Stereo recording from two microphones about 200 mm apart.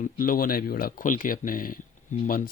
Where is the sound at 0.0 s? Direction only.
45° left (ahead or behind).